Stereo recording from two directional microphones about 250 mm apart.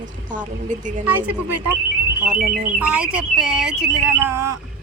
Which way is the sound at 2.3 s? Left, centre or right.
Right.